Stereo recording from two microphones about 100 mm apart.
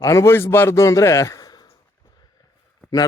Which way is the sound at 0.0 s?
35° left (ahead or behind).